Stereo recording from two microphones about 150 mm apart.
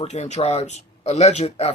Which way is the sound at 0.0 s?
50° left (ahead or behind).